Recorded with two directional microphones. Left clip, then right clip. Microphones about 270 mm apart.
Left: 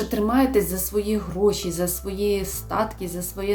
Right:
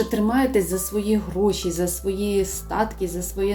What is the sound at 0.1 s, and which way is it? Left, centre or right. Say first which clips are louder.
Speech: even; centre.